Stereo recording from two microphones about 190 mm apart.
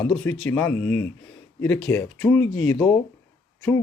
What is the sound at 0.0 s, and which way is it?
Speech, 5° left (ahead or behind).